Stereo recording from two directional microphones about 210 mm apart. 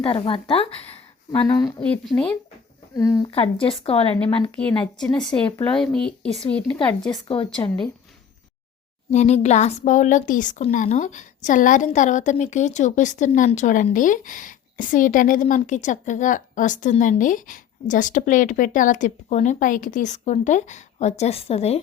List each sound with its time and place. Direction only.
0.0 s speech: 25° left (ahead or behind)
1.3 s speech: 10° left (ahead or behind)
3.2 s speech: 25° left (ahead or behind)
4.1 s speech: 5° left (ahead or behind)
7.1 s speech: 25° left (ahead or behind)
9.0 s speech: 35° left (ahead or behind)